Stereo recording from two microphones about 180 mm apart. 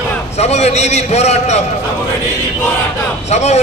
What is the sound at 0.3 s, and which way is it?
A man's voice, 35° left (ahead or behind).